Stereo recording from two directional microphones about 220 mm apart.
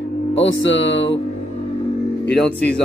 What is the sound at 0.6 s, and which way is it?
Music, 55° left (ahead or behind).